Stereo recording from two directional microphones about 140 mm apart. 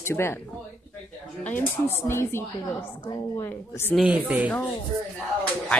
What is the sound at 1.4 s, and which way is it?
Speech, 15° left (ahead or behind).